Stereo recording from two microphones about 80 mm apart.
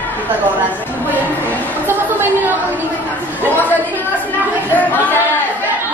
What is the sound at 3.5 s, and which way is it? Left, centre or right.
Speech, left.